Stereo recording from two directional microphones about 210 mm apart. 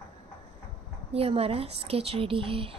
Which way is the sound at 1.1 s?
30° right (ahead or behind).